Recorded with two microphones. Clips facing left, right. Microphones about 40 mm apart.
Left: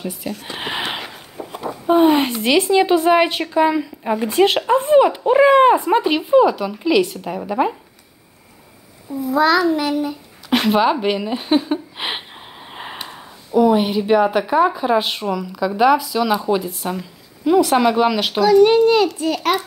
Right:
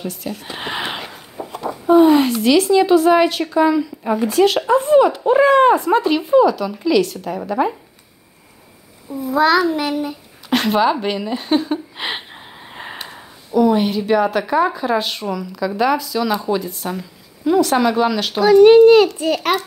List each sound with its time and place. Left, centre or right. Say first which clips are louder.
0.0 s speech: even; centre
0.3 s a sound: left 1 dB; centre
1.5 s chicken: right 2 dB; centre
1.9 s a woman's voice: right 3 dB; left
4.0 s speech: right 2 dB; centre
4.3 s a woman's voice: even; left
9.3 s a child's voice: even; right
10.5 s speech: even; centre
18.4 s a child's voice: right 4 dB; right